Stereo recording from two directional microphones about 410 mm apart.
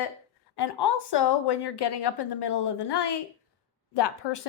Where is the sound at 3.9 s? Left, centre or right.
Left.